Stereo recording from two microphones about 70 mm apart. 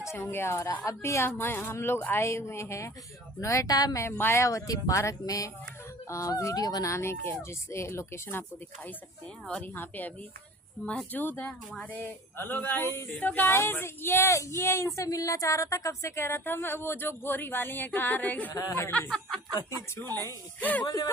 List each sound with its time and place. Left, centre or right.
0.0 s a woman's voice: left
1.4 s a woman's voice: left
4.2 s speech: left
6.1 s honk: left
6.8 s a woman's voice: left
18.5 s speech: left
20.6 s speech: left
20.8 s honk: left